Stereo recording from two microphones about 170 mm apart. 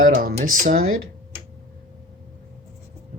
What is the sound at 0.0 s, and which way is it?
Speech, 60° right (ahead or behind).